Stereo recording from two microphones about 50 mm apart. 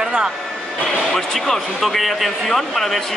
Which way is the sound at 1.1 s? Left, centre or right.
Centre.